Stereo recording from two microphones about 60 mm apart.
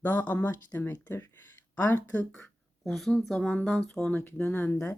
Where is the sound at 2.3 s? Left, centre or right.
Centre.